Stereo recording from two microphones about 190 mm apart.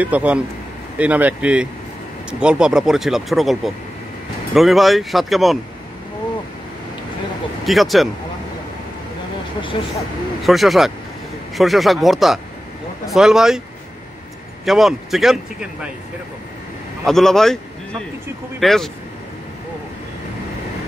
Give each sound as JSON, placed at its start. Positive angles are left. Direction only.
{"t": 0.0, "sound": "speech", "side_deg": -10}
{"t": 7.6, "sound": "speech", "side_deg": 0}
{"t": 9.6, "sound": "speech", "side_deg": 25}
{"t": 10.4, "sound": "speech", "side_deg": 0}
{"t": 14.6, "sound": "speech", "side_deg": 0}
{"t": 17.0, "sound": "speech", "side_deg": 0}
{"t": 18.6, "sound": "speech", "side_deg": 0}